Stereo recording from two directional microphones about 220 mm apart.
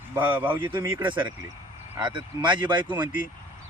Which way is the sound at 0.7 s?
20° right (ahead or behind).